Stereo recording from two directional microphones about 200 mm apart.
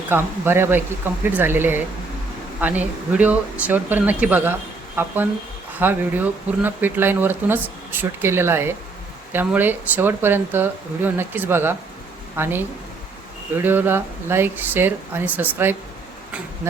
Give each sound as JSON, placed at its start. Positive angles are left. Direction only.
{"t": 0.1, "sound": "speech", "side_deg": -10}